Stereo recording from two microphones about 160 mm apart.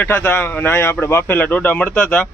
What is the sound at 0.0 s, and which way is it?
Speech, 10° left (ahead or behind).